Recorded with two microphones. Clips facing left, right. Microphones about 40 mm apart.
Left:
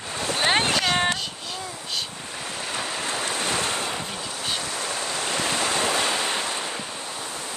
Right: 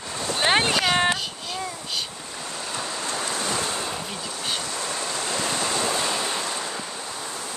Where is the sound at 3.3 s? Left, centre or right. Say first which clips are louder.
Left 1 dB; left.